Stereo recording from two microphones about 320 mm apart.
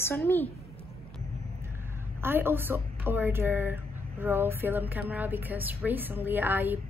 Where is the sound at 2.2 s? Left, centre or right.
Centre.